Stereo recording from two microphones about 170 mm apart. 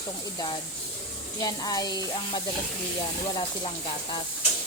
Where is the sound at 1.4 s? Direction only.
20° left (ahead or behind).